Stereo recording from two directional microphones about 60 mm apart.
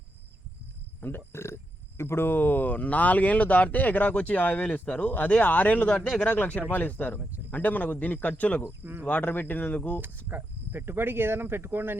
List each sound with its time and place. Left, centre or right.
1.0 s speech: left
8.8 s speech: right
9.0 s speech: left
10.2 s speech: right